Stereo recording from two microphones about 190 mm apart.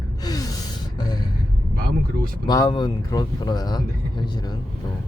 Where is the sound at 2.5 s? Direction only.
20° left (ahead or behind).